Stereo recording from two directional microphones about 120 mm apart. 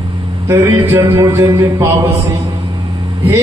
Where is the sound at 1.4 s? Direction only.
30° right (ahead or behind).